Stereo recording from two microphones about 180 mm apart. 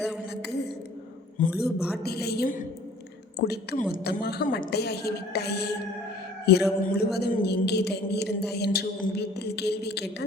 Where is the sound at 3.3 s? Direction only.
65° left (ahead or behind).